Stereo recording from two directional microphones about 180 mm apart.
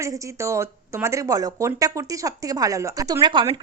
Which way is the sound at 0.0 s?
15° right (ahead or behind).